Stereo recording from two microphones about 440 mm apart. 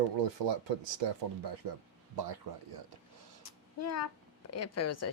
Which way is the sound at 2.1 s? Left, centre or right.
Right.